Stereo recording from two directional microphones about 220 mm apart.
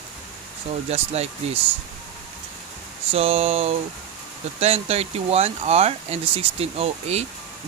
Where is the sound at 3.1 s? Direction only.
25° right (ahead or behind).